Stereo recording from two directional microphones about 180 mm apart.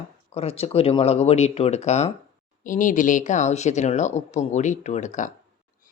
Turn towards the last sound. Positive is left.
turn(degrees=45)  # may be behind; listen again after turning